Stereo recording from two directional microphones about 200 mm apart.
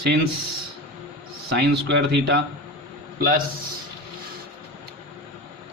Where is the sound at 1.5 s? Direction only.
60° right (ahead or behind).